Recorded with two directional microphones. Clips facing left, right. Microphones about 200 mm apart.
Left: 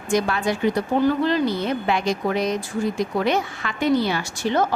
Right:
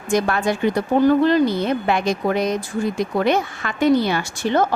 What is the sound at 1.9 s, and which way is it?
A woman's voice, 50° right (ahead or behind).